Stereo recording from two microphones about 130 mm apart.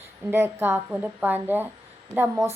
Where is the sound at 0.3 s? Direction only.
15° right (ahead or behind).